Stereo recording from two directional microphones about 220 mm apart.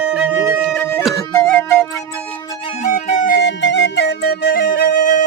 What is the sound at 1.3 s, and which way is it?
Music, 10° left (ahead or behind).